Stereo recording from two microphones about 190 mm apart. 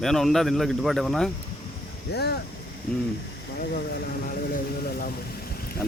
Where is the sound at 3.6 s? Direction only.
55° left (ahead or behind).